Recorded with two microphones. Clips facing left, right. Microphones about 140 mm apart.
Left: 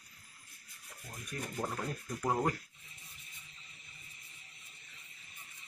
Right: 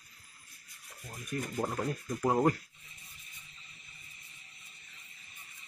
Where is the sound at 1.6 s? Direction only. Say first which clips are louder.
Right 4 dB; 15° right (ahead or behind).